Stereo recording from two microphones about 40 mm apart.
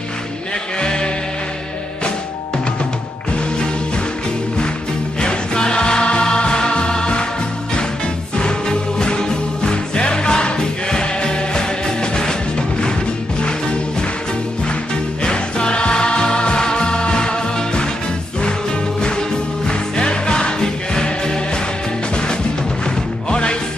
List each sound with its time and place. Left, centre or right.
0.7 s music: left
5.2 s music: left
8.4 s music: left
15.2 s music: left
18.9 s music: centre